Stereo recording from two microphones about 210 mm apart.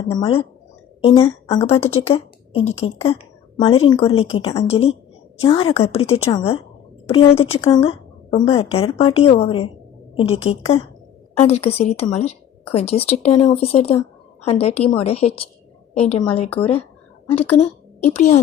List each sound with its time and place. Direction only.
0.0 s a woman's voice: 25° left (ahead or behind)
2.0 s a sound: 30° left (ahead or behind)
2.8 s a woman's voice: 30° left (ahead or behind)
18.1 s a woman's voice: 35° left (ahead or behind)